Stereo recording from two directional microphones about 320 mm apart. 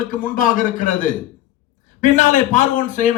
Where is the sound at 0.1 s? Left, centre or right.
Left.